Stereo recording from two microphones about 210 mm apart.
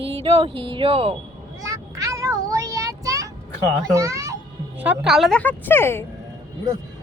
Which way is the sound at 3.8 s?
15° right (ahead or behind).